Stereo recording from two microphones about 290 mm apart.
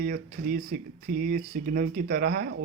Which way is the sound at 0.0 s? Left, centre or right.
Right.